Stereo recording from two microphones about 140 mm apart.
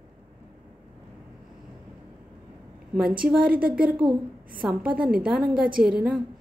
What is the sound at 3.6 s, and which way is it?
Speech, 90° right.